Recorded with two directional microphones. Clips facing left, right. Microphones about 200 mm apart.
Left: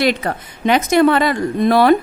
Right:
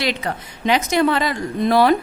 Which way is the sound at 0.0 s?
50° left (ahead or behind).